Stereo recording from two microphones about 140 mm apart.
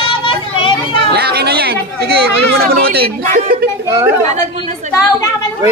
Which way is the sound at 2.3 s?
90° right.